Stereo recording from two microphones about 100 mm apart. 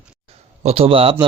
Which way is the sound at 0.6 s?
80° right.